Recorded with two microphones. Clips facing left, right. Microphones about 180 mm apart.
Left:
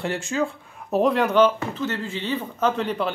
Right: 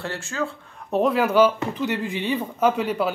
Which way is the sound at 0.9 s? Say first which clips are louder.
Even; centre (ahead or behind).